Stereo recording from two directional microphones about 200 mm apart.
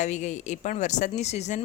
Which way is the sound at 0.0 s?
35° left (ahead or behind).